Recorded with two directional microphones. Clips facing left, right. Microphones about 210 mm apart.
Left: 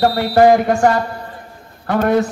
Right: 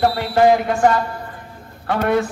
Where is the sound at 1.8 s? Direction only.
45° left (ahead or behind).